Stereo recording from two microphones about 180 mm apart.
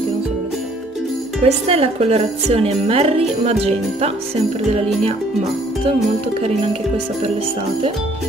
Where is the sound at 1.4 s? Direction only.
35° right (ahead or behind).